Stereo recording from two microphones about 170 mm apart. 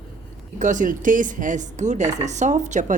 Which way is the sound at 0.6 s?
50° right (ahead or behind).